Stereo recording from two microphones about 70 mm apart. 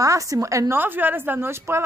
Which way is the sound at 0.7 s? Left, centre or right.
Right.